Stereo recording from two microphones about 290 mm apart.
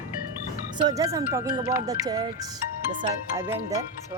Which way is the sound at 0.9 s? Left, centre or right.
Centre.